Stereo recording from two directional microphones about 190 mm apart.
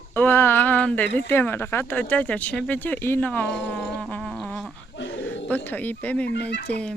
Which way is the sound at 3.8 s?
Centre (ahead or behind).